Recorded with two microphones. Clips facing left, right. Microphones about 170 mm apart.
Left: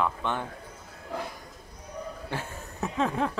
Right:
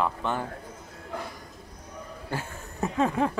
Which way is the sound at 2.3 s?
5° right (ahead or behind).